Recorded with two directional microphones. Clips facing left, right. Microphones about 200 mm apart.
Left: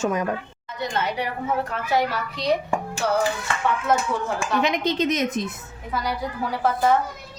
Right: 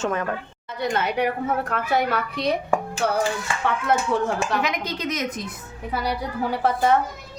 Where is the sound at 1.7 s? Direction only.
55° right (ahead or behind).